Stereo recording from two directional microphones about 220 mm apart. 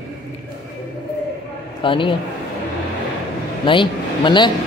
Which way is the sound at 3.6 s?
20° left (ahead or behind).